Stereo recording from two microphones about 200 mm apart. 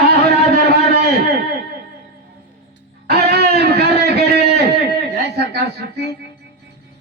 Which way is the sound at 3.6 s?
50° right (ahead or behind).